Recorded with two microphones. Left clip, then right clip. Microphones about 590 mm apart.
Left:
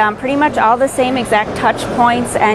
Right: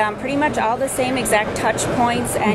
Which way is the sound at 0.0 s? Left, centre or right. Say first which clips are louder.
Left 6 dB; left.